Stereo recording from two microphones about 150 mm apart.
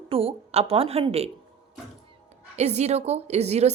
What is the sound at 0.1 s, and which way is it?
A woman's voice, 40° right (ahead or behind).